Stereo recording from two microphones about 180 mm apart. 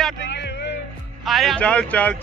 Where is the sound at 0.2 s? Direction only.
70° left (ahead or behind).